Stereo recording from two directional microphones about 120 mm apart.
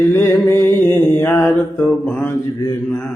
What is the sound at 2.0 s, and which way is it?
Mantra, 15° left (ahead or behind).